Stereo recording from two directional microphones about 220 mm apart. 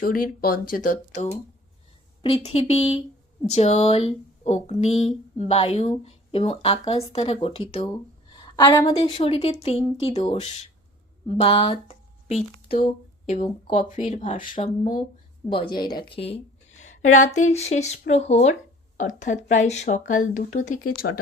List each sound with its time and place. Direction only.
0.0 s speech: 40° left (ahead or behind)
15.4 s speech: 20° left (ahead or behind); by 21.1 s 40° left (ahead or behind)